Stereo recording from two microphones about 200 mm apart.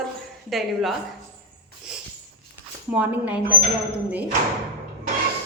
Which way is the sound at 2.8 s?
5° right (ahead or behind).